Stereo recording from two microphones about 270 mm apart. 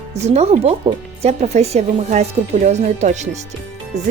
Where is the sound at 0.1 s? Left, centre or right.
Right.